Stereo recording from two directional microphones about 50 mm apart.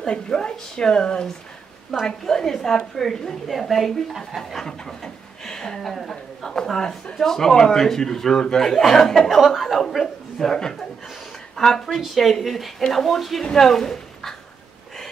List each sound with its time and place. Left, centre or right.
0.0 s a woman's voice: centre